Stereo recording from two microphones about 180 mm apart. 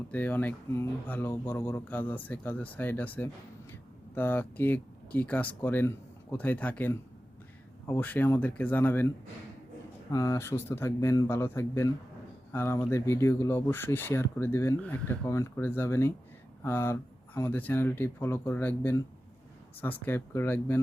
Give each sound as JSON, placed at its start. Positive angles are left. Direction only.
{"t": 0.1, "sound": "speech", "side_deg": 10}